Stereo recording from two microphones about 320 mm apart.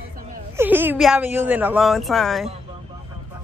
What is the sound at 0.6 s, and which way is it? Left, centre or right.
Speech, centre.